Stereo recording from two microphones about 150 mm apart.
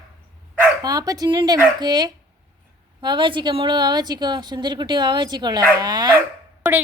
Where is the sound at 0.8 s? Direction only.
25° right (ahead or behind).